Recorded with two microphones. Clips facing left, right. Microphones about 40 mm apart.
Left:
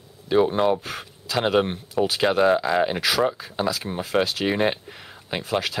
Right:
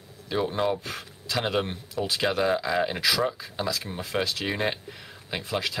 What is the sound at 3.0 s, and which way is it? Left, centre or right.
Speech, left.